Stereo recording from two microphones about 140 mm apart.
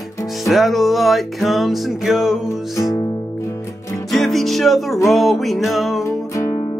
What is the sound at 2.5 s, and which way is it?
Music, 25° left (ahead or behind).